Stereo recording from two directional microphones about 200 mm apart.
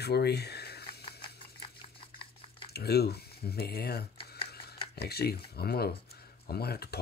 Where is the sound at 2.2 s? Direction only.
25° left (ahead or behind).